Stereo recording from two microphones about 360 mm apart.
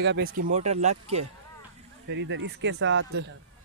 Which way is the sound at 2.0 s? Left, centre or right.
Right.